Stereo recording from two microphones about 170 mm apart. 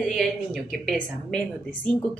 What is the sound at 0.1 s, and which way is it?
A woman's voice, centre (ahead or behind).